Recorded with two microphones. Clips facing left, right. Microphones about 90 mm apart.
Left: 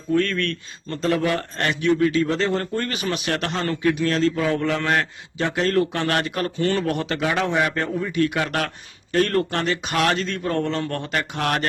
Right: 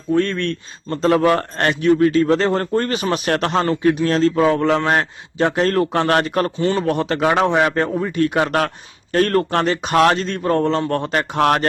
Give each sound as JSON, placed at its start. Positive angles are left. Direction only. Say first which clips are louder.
{"t": 0.1, "sound": "a man's voice", "louder": "right 3 dB", "side_deg": -30}
{"t": 6.6, "sound": "a man's voice", "louder": "right 1 dB", "side_deg": -25}
{"t": 7.2, "sound": "speech", "louder": "right 7 dB", "side_deg": -50}
{"t": 7.4, "sound": "a man's voice", "louder": "right 5 dB", "side_deg": -35}